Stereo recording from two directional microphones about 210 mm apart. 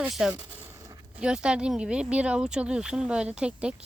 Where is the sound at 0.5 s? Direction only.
10° right (ahead or behind).